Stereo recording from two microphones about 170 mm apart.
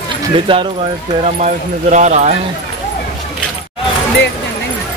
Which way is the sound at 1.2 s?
40° right (ahead or behind).